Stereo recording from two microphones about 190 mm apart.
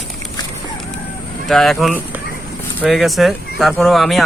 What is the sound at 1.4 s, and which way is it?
Speech, centre (ahead or behind).